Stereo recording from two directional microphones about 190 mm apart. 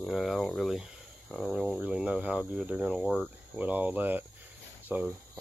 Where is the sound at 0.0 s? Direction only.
Centre (ahead or behind).